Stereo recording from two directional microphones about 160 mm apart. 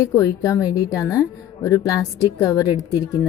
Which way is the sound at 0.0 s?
20° left (ahead or behind).